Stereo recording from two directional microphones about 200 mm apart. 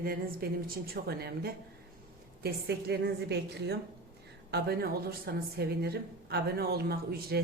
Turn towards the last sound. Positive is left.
turn(degrees=-50)  # may be behind; listen again after turning